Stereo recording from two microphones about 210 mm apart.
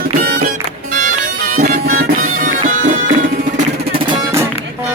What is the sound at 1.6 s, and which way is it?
Music, 40° right (ahead or behind).